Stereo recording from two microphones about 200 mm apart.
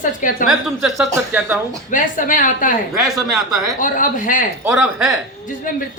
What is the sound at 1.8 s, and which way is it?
Speech, 40° left (ahead or behind).